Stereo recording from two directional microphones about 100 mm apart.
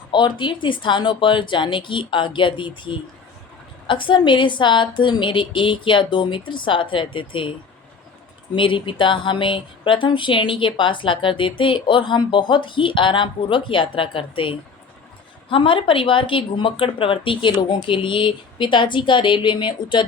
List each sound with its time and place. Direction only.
0.1 s a woman's voice: 50° left (ahead or behind)
8.5 s speech: 55° left (ahead or behind)